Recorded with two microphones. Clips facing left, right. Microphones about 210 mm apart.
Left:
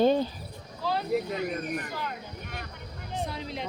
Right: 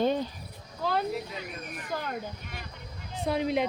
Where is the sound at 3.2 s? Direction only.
60° right (ahead or behind).